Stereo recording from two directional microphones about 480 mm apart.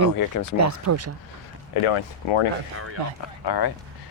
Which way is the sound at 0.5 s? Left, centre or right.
Right.